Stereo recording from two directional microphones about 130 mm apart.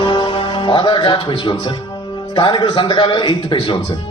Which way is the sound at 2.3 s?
35° left (ahead or behind).